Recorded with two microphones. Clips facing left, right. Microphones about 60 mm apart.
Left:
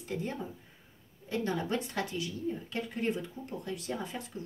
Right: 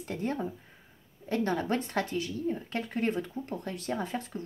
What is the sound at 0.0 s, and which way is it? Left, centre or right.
Speech, right.